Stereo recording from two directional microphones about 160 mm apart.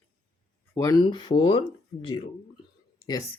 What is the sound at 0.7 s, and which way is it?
Speech, 20° left (ahead or behind).